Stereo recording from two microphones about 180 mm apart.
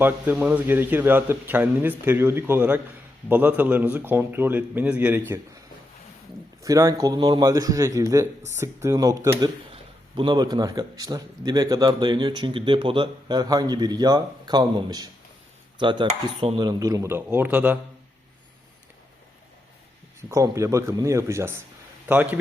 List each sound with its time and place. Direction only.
0.0 s a man's voice: 10° right (ahead or behind)
6.6 s a man's voice: 20° right (ahead or behind)
9.7 s a man's voice: 25° right (ahead or behind); by 17.7 s 10° right (ahead or behind)
20.3 s a man's voice: 15° right (ahead or behind)